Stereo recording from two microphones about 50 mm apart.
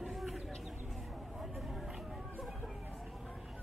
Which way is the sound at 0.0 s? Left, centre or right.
Centre.